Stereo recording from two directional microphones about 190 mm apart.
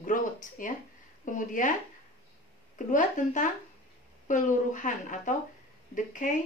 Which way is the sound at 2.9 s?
40° left (ahead or behind).